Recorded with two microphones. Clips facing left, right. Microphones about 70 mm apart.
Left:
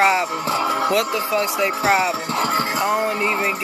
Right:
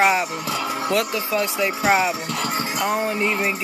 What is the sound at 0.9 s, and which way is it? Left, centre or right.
Speech, centre.